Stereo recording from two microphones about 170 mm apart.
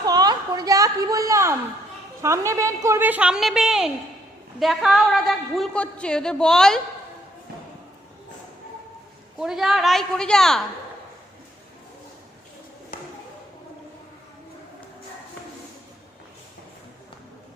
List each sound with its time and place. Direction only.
0.0 s a sound: 25° right (ahead or behind)
2.2 s a woman's voice: 15° right (ahead or behind); by 6.8 s 5° left (ahead or behind)
9.4 s a woman's voice: centre (ahead or behind)